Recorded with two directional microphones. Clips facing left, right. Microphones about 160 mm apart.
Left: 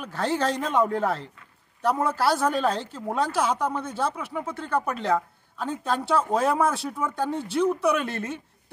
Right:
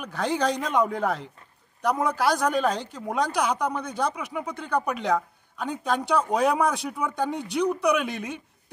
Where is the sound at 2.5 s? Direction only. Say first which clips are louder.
Even; 15° right (ahead or behind).